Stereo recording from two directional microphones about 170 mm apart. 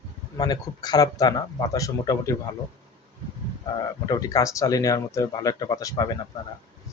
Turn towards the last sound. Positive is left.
turn(degrees=20)  # may be behind; listen again after turning